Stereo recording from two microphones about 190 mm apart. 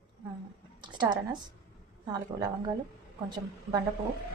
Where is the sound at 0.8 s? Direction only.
25° right (ahead or behind).